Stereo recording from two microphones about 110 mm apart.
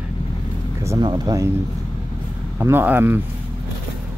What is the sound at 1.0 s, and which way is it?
Speech, 40° right (ahead or behind).